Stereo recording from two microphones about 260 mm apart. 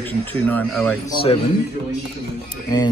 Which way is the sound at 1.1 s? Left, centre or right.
Left.